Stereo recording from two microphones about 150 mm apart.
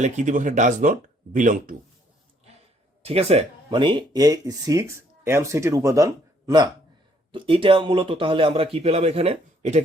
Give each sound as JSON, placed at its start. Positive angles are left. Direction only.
{"t": 0.0, "sound": "speech", "side_deg": -55}
{"t": 3.0, "sound": "speech", "side_deg": -40}
{"t": 7.3, "sound": "speech", "side_deg": -35}